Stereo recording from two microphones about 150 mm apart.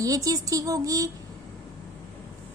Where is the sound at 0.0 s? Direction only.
25° right (ahead or behind).